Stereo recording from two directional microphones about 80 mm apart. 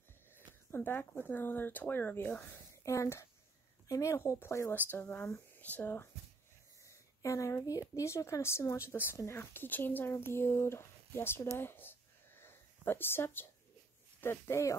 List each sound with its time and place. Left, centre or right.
0.7 s speech: left
2.7 s a woman's voice: left
4.9 s speech: left
6.9 s a sound: left
7.9 s speech: left
11.5 s a sound: left
14.2 s speech: left